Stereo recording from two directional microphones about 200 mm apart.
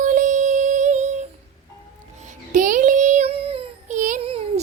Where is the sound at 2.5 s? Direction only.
40° right (ahead or behind).